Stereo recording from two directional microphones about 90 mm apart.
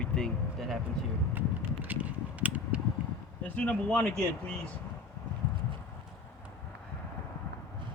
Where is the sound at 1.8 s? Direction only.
15° right (ahead or behind).